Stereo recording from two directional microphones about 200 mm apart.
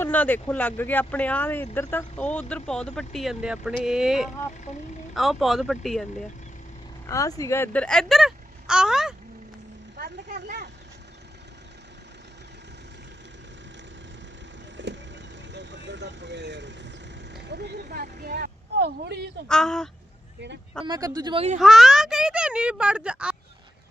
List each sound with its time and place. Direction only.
0.0 s speech: 10° left (ahead or behind)
7.1 s speech: 15° left (ahead or behind); by 9.1 s 5° right (ahead or behind)
10.0 s vehicle: 40° right (ahead or behind)
14.8 s vehicle: 60° right (ahead or behind)
19.5 s speech: 5° left (ahead or behind)
20.8 s speech: 20° right (ahead or behind)
21.6 s speech: centre (ahead or behind)